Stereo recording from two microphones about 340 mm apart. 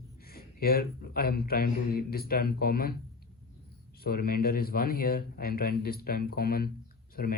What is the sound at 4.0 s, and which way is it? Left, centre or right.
Speech, left.